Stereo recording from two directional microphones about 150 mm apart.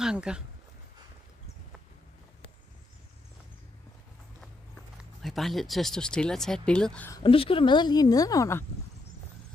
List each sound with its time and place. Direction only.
0.0 s speech: 5° right (ahead or behind)
5.2 s speech: centre (ahead or behind)
7.2 s speech: 35° left (ahead or behind); by 8.6 s 20° left (ahead or behind)